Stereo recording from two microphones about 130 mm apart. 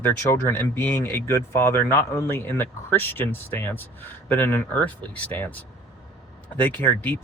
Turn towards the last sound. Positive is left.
turn(degrees=15)  # may be behind; listen again after turning